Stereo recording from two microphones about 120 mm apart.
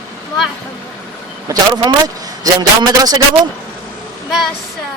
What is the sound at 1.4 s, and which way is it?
A man's voice, 35° right (ahead or behind).